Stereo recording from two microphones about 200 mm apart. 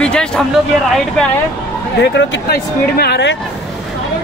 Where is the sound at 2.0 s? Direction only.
55° left (ahead or behind).